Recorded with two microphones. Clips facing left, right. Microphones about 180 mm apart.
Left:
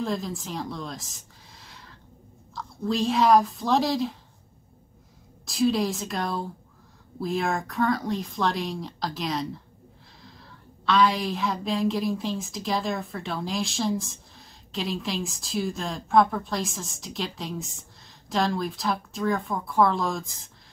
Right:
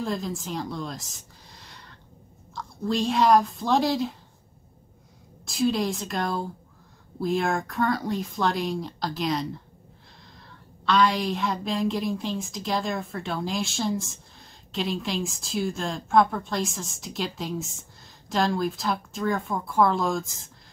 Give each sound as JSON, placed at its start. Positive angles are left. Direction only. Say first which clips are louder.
{"t": 0.0, "sound": "a woman's voice", "louder": "even", "side_deg": 0}
{"t": 5.4, "sound": "speech", "louder": "left 1 dB", "side_deg": 0}
{"t": 10.9, "sound": "speech", "louder": "even", "side_deg": 0}